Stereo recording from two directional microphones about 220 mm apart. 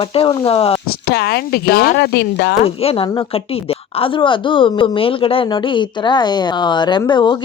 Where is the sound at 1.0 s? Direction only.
50° left (ahead or behind).